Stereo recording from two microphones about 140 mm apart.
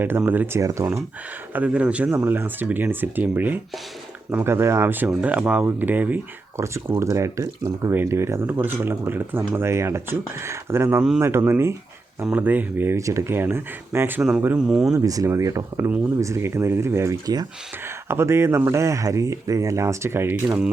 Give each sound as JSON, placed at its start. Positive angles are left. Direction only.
{"t": 0.2, "sound": "speech", "side_deg": -15}
{"t": 1.5, "sound": "speech", "side_deg": -10}
{"t": 14.9, "sound": "speech", "side_deg": -25}